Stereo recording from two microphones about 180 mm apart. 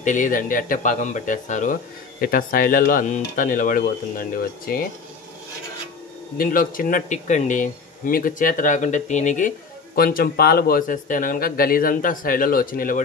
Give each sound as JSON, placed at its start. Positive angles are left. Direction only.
{"t": 0.0, "sound": "speech", "side_deg": 45}
{"t": 6.3, "sound": "speech", "side_deg": 50}
{"t": 9.9, "sound": "speech", "side_deg": 55}